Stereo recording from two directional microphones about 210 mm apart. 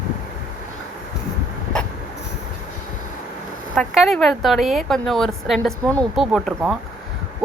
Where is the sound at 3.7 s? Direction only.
Centre (ahead or behind).